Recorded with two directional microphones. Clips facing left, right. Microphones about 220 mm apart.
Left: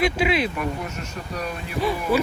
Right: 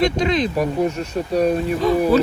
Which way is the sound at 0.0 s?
5° left (ahead or behind).